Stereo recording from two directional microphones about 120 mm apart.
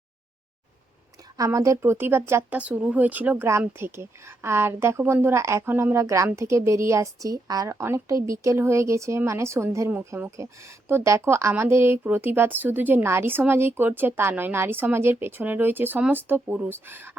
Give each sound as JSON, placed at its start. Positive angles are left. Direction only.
{"t": 1.5, "sound": "speech", "side_deg": -25}